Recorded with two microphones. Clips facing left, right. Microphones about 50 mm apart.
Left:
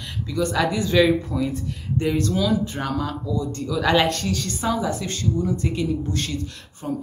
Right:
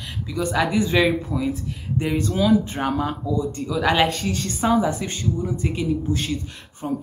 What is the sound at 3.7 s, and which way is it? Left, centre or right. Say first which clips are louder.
Speech: even; centre.